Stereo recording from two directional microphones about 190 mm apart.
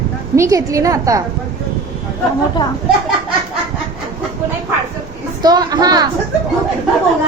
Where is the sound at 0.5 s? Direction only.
15° right (ahead or behind).